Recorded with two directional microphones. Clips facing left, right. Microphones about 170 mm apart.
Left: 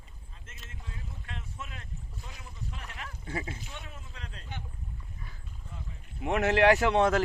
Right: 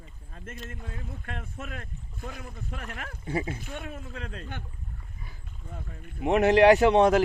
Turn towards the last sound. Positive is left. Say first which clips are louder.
# right 5 dB
turn(degrees=-20)  # may be behind; listen again after turning